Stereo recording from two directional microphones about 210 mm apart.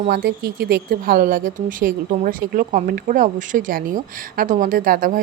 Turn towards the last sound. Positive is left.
turn(degrees=-40)  # may be behind; listen again after turning